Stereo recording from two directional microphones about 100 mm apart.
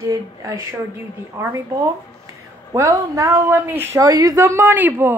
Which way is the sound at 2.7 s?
35° right (ahead or behind).